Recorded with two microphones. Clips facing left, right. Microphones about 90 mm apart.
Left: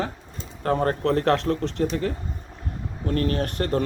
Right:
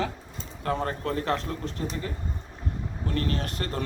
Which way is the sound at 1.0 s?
60° left (ahead or behind).